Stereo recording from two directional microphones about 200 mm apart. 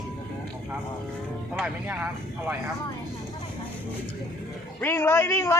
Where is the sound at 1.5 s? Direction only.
5° right (ahead or behind).